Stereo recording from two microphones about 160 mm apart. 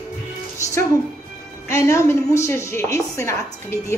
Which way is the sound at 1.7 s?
15° left (ahead or behind).